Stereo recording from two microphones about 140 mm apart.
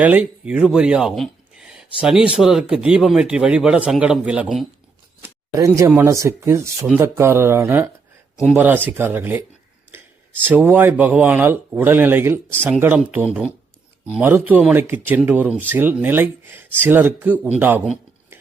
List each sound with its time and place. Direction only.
0.0 s speech: 10° right (ahead or behind)
5.5 s speech: 25° right (ahead or behind)
9.9 s a sound: 15° right (ahead or behind)
10.4 s speech: 15° right (ahead or behind)